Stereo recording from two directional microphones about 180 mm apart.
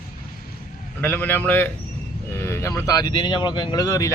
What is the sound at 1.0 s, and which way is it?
Speech, 10° left (ahead or behind).